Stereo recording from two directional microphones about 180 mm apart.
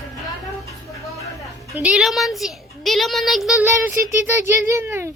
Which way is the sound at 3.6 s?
15° right (ahead or behind).